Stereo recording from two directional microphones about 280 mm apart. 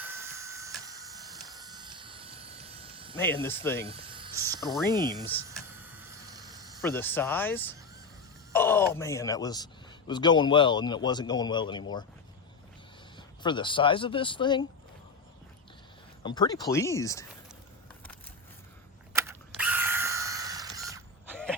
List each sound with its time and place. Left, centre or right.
0.0 s printer: centre
0.9 s a sound: centre
3.4 s a man's voice: centre
3.8 s a sound: centre
4.9 s speech: centre
5.1 s a man's voice: centre
5.5 s vehicle: centre
6.8 s a man's voice: centre
13.1 s speech: centre
16.2 s a man's voice: centre
19.1 s mechanisms: centre